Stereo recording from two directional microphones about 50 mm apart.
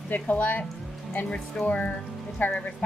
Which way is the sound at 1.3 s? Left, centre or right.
Centre.